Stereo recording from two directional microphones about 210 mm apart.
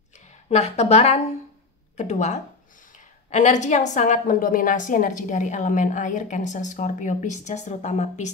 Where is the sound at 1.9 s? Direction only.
35° left (ahead or behind).